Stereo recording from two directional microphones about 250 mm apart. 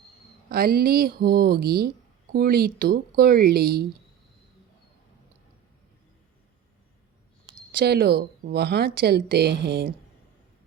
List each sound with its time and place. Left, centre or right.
0.5 s speech: right
7.4 s speech: right